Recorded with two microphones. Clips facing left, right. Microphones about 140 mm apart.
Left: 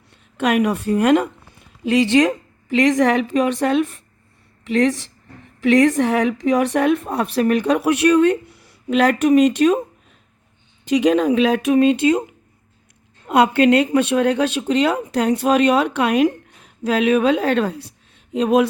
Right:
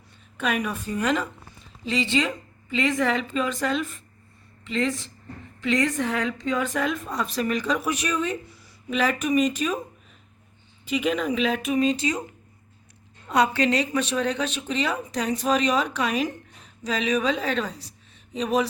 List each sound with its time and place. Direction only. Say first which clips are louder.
0.3 s a woman's voice: left 9 dB; 80° left; by 4.0 s 60° left (ahead or behind)
4.6 s a woman's voice: left 8 dB; 85° left
10.8 s a woman's voice: left 9 dB; 90° left; by 12.2 s 55° left (ahead or behind)
13.2 s speech: left 7 dB; 55° left (ahead or behind)